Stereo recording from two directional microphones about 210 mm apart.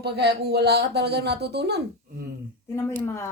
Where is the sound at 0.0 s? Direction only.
50° right (ahead or behind).